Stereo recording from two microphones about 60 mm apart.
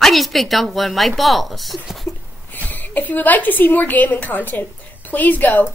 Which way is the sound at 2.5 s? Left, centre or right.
Left.